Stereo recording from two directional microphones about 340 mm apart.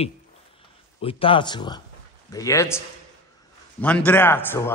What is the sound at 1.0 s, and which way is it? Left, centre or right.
A man's voice, centre.